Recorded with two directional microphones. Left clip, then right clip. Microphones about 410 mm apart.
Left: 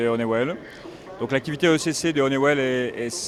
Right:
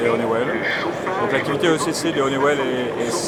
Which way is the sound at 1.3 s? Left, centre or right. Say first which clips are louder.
Left 1 dB; left.